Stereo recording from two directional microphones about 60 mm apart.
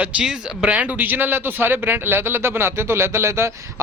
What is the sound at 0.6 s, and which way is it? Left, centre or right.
Speech, right.